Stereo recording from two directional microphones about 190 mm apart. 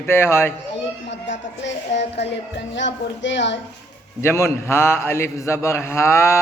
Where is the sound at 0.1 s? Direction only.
15° left (ahead or behind).